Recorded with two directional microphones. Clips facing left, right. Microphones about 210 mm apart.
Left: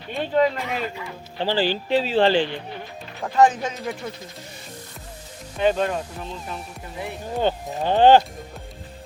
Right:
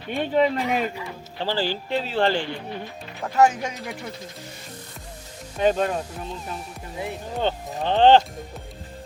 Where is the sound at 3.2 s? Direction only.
10° right (ahead or behind).